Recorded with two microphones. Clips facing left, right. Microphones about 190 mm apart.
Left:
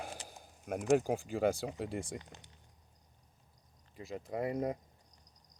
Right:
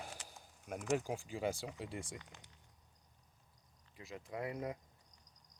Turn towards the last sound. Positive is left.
turn(degrees=40)  # may be behind; listen again after turning